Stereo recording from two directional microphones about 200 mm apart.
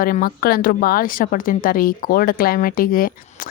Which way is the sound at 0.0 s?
45° left (ahead or behind).